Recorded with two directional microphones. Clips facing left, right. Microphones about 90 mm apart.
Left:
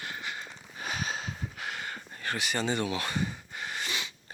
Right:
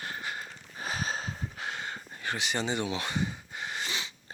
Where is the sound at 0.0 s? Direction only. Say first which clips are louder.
Right 1 dB; 35° right (ahead or behind).